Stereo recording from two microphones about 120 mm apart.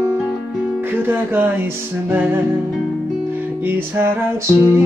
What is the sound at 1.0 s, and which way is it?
Music, 15° right (ahead or behind).